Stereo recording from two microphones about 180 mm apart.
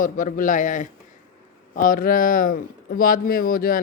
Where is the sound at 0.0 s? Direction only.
50° left (ahead or behind).